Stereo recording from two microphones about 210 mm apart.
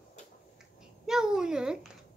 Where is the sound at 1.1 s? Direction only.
5° right (ahead or behind).